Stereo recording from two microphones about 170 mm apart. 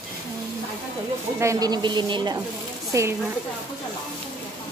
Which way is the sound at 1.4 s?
20° right (ahead or behind).